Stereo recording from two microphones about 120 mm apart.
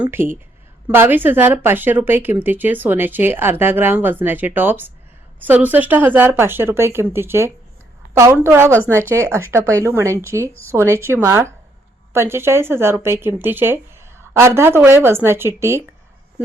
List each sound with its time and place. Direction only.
0.0 s speech: 20° right (ahead or behind)